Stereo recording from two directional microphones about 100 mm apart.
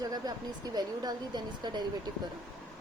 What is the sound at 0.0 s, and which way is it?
Speech, 40° right (ahead or behind).